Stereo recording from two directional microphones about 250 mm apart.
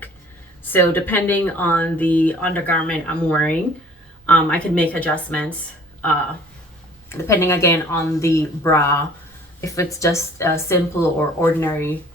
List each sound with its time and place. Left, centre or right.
0.7 s speech: centre
7.1 s speech: centre